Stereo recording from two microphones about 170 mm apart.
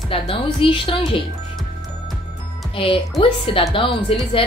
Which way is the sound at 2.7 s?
30° left (ahead or behind).